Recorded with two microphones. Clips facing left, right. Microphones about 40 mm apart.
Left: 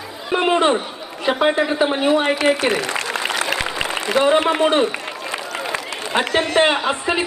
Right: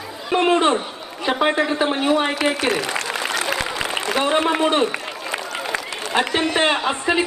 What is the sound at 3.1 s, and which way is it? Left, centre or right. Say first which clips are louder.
Applause: left 1 dB; centre.